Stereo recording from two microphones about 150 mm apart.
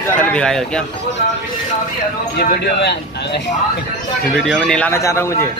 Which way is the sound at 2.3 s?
90° left.